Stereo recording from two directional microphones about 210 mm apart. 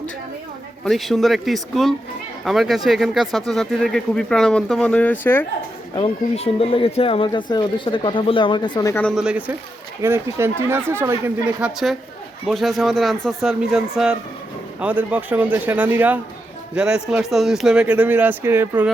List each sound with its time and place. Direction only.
0.9 s speech: centre (ahead or behind)
6.0 s speech: 30° left (ahead or behind); by 18.9 s 10° right (ahead or behind)